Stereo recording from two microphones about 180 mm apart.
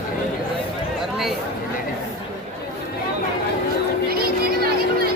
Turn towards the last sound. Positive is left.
turn(degrees=-60)  # may be behind; listen again after turning